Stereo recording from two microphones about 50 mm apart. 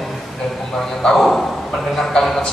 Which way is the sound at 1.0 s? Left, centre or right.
Centre.